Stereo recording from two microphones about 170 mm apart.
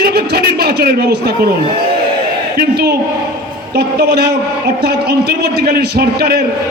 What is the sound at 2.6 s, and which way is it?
A man's voice, 70° right (ahead or behind).